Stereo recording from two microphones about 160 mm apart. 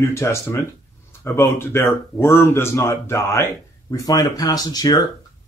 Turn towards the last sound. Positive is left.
turn(degrees=25)  # may be behind; listen again after turning